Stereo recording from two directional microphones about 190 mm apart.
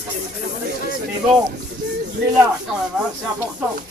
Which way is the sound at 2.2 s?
60° right (ahead or behind).